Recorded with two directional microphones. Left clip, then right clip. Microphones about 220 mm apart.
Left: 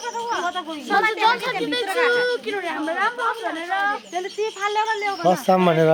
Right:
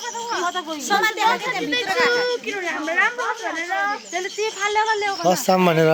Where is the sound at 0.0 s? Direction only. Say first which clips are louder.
Left 1 dB; 35° left (ahead or behind).